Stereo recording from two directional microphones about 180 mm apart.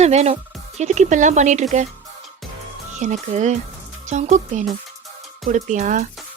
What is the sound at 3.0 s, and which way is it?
Speech, 40° right (ahead or behind).